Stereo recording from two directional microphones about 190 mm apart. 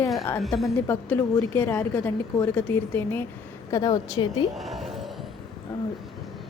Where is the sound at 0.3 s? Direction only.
Centre (ahead or behind).